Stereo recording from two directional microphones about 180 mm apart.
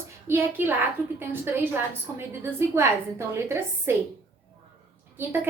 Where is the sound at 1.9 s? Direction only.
15° right (ahead or behind).